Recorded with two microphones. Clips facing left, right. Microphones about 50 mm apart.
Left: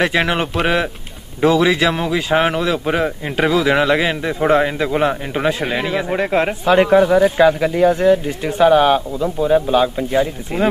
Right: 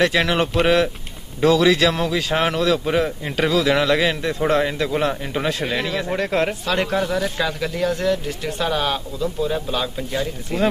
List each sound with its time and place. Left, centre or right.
0.0 s speech: centre